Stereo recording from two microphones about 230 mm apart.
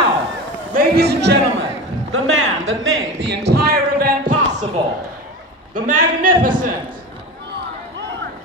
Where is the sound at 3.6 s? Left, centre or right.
Right.